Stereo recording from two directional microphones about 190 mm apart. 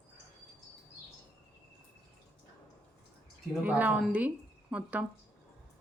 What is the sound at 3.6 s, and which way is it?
A woman's voice, 10° right (ahead or behind).